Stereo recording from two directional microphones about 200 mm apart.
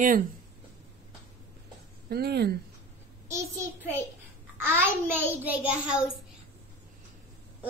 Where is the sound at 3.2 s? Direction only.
15° right (ahead or behind).